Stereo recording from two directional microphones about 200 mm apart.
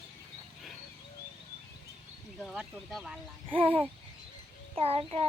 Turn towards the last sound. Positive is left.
turn(degrees=-30)  # may be behind; listen again after turning